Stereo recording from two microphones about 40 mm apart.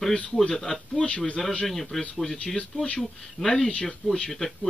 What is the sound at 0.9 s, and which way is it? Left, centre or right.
Speech, left.